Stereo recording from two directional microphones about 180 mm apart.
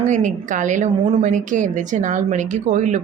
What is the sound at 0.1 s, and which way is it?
A woman's voice, 45° right (ahead or behind).